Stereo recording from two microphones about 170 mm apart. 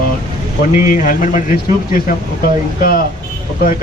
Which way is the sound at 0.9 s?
55° left (ahead or behind).